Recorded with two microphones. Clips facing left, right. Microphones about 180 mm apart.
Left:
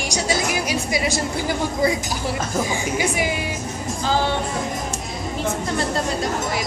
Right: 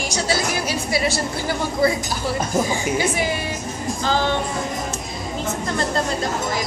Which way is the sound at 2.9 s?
15° left (ahead or behind).